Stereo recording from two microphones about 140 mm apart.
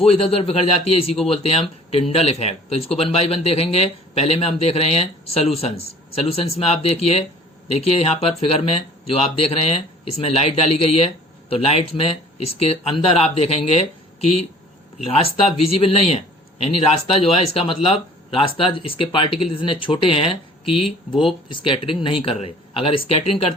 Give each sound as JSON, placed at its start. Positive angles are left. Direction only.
{"t": 0.0, "sound": "speech", "side_deg": 45}